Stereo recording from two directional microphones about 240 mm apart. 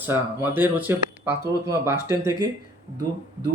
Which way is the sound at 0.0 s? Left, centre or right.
Centre.